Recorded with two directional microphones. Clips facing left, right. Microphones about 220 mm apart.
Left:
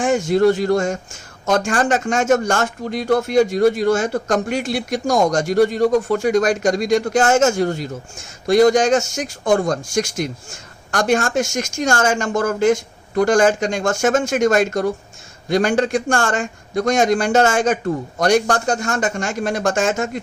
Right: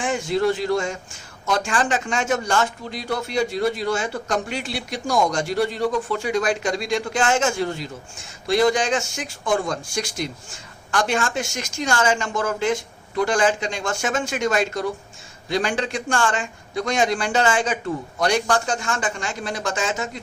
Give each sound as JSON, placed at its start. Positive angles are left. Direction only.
{"t": 0.0, "sound": "speech", "side_deg": 45}